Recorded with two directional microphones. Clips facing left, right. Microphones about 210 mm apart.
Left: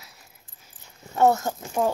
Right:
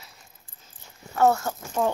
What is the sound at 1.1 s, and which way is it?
Speech, 20° left (ahead or behind).